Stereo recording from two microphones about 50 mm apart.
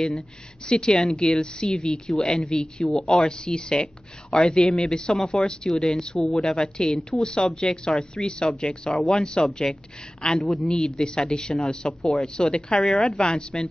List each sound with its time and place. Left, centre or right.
0.7 s a woman's voice: centre